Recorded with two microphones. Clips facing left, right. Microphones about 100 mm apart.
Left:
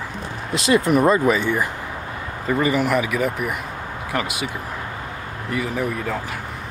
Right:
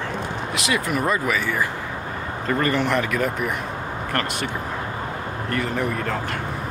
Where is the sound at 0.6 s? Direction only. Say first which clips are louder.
Left 8 dB; 30° left (ahead or behind).